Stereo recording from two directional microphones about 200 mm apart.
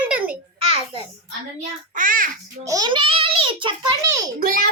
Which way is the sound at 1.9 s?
45° right (ahead or behind).